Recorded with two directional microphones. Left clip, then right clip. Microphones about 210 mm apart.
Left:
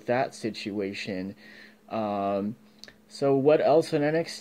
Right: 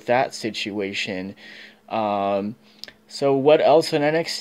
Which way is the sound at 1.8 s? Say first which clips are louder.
Right 6 dB; 40° right (ahead or behind).